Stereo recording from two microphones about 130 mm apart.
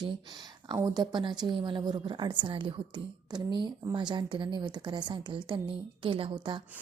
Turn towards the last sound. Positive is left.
turn(degrees=-40)  # may be behind; listen again after turning